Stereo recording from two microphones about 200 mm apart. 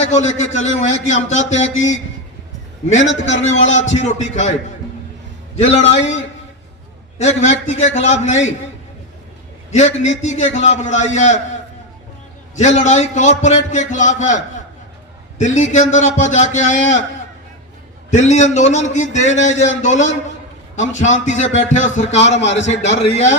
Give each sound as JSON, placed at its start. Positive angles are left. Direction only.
{"t": 0.0, "sound": "a man's voice", "side_deg": 35}
{"t": 3.0, "sound": "a man's voice", "side_deg": 70}
{"t": 4.0, "sound": "a man's voice", "side_deg": 35}
{"t": 5.8, "sound": "a man's voice", "side_deg": 65}
{"t": 7.2, "sound": "a man's voice", "side_deg": 35}
{"t": 9.7, "sound": "a man's voice", "side_deg": 35}
{"t": 12.5, "sound": "a man's voice", "side_deg": 35}
{"t": 18.1, "sound": "a man's voice", "side_deg": 35}